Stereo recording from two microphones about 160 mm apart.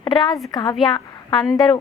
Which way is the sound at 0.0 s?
30° left (ahead or behind).